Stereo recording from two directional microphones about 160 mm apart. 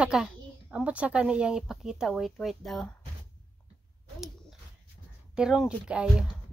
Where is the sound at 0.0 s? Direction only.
5° right (ahead or behind).